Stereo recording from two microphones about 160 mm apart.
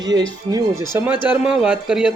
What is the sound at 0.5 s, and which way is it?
Speech, 15° right (ahead or behind).